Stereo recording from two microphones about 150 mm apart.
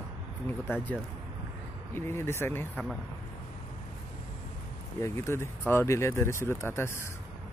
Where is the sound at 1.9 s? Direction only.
15° left (ahead or behind).